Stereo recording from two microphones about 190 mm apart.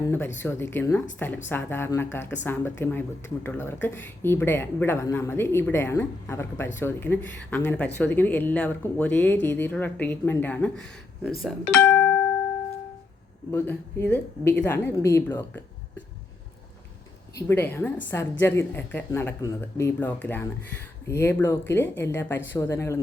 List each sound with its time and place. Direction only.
0.3 s speech: 15° left (ahead or behind)
11.4 s music: 10° left (ahead or behind)
13.5 s speech: 10° left (ahead or behind)
17.5 s speech: 10° left (ahead or behind)